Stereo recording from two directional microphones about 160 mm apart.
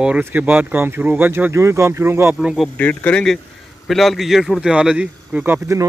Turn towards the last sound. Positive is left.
turn(degrees=-15)  # may be behind; listen again after turning